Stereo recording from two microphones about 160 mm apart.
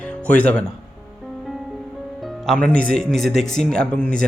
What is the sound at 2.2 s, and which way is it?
Music, centre (ahead or behind).